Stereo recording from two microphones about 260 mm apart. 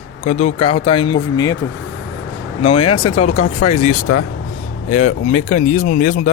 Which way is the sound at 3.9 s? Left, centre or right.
Left.